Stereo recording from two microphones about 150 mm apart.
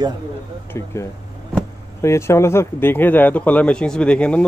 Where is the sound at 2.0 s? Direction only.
20° left (ahead or behind).